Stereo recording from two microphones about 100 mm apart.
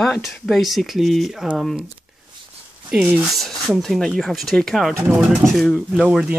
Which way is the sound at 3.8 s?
5° left (ahead or behind).